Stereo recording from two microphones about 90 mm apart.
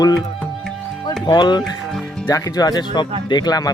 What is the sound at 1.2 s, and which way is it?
Speech, 55° left (ahead or behind).